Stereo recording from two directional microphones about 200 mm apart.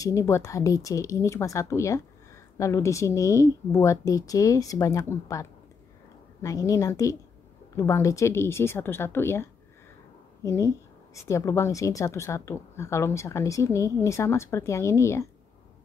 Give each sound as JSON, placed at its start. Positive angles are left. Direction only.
{"t": 0.0, "sound": "a woman's voice", "side_deg": 15}